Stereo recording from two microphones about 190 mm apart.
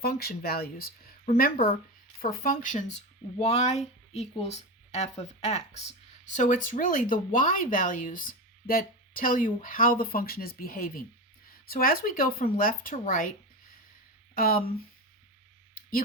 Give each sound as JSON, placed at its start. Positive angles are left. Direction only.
{"t": 0.0, "sound": "speech", "side_deg": 55}
{"t": 14.3, "sound": "speech", "side_deg": 50}
{"t": 15.7, "sound": "a sound", "side_deg": 50}